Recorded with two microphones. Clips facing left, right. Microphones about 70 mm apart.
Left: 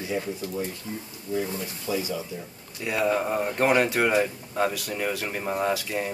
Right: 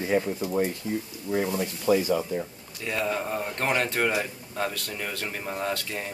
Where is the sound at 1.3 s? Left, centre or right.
Right.